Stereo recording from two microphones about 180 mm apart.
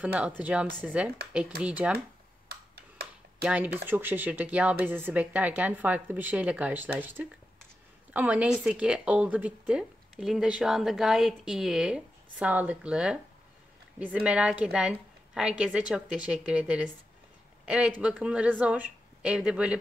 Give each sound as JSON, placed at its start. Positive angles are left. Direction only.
{"t": 0.0, "sound": "speech", "side_deg": -10}
{"t": 2.4, "sound": "tick-tock", "side_deg": -65}
{"t": 3.4, "sound": "a woman's voice", "side_deg": -10}